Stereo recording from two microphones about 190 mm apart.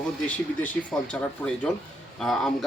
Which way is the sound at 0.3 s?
5° left (ahead or behind).